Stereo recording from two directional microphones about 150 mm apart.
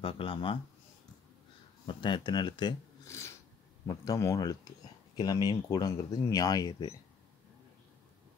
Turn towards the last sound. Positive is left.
turn(degrees=25)  # may be behind; listen again after turning